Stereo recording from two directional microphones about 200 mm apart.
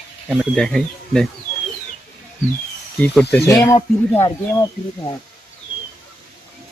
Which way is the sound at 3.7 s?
30° left (ahead or behind).